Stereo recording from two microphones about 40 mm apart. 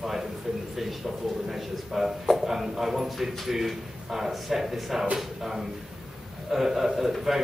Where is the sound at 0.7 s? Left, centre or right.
Centre.